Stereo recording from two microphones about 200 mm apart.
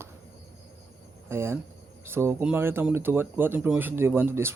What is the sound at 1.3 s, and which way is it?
Speech, 10° right (ahead or behind).